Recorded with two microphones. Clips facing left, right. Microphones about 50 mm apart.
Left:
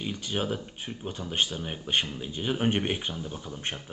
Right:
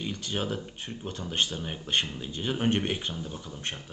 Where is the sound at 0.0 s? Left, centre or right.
Centre.